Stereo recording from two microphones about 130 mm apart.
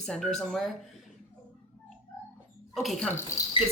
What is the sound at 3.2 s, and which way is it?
Speech, 20° left (ahead or behind).